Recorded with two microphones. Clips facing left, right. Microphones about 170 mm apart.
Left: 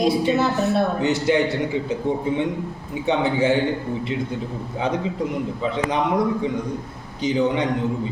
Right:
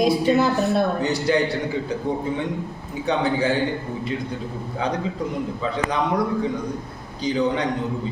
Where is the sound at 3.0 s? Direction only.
20° left (ahead or behind).